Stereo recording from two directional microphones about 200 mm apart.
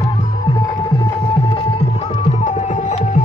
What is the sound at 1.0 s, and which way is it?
Music, 25° left (ahead or behind).